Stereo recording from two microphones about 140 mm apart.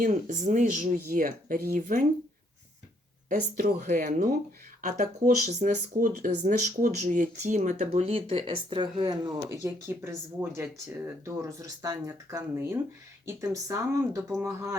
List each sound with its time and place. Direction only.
0.0 s speech: 65° right (ahead or behind)
3.2 s speech: 80° right
4.8 s speech: 60° right (ahead or behind)
6.0 s speech: 75° right (ahead or behind); by 9.3 s 35° right (ahead or behind)
9.5 s speech: 20° right (ahead or behind)